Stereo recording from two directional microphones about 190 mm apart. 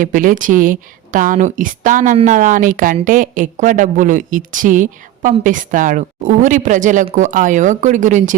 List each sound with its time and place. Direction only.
0.0 s a woman's voice: 45° right (ahead or behind)